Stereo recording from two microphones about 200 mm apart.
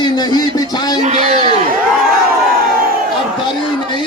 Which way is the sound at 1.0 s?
35° right (ahead or behind).